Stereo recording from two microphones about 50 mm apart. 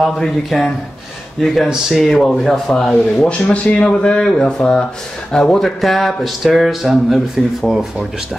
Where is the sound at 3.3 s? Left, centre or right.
Left.